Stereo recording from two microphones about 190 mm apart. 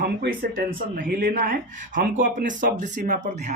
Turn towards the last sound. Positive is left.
turn(degrees=-40)  # may be behind; listen again after turning